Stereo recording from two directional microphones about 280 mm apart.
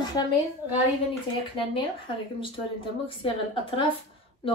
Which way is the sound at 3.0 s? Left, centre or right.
Centre.